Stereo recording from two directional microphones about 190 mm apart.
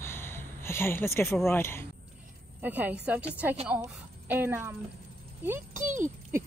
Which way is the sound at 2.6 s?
10° right (ahead or behind).